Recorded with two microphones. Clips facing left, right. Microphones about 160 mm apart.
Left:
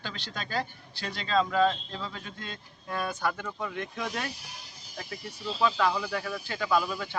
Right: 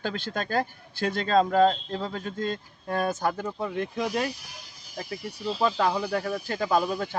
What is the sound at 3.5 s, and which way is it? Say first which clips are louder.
Speech: right 5 dB; 30° right (ahead or behind).